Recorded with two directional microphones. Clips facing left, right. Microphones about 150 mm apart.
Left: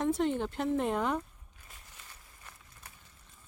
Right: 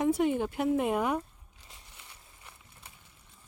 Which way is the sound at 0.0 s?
10° right (ahead or behind).